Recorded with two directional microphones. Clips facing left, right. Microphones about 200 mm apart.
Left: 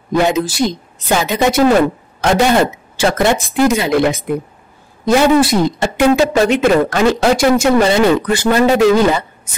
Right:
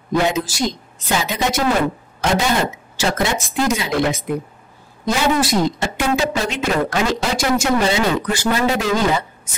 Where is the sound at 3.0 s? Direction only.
55° left (ahead or behind).